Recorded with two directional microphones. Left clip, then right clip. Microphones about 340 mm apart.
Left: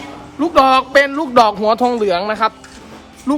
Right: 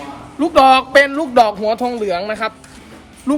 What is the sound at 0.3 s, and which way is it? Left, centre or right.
A man's voice, centre.